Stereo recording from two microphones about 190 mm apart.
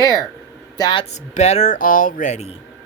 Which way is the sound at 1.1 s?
35° left (ahead or behind).